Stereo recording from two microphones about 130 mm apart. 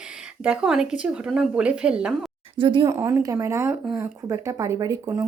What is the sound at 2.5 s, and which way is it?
Speech, 40° right (ahead or behind).